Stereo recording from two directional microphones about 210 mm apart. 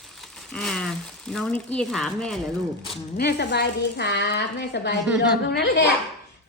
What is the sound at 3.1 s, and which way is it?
A woman's voice, 50° left (ahead or behind).